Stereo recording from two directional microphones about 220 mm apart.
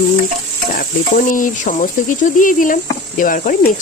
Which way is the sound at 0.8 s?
40° left (ahead or behind).